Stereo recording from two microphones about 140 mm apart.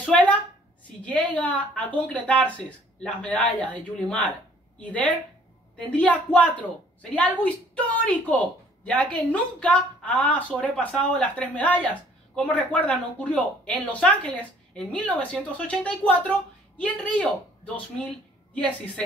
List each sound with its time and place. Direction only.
0.0 s a sound: 10° left (ahead or behind)
1.0 s speech: 10° left (ahead or behind)
18.5 s speech: 10° left (ahead or behind)